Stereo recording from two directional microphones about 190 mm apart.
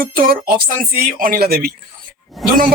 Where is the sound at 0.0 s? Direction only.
50° right (ahead or behind).